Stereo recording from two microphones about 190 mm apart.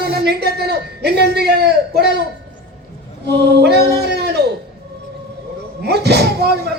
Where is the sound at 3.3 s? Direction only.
60° right (ahead or behind).